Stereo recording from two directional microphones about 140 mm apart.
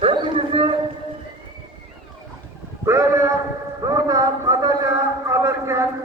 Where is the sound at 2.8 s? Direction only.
20° right (ahead or behind).